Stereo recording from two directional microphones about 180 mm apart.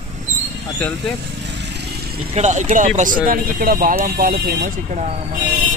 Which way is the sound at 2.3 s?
40° right (ahead or behind).